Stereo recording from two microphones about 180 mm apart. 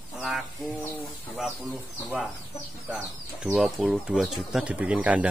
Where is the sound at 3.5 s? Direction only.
Centre (ahead or behind).